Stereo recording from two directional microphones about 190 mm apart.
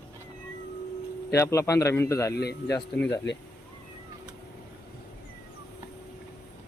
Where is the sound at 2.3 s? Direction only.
60° left (ahead or behind).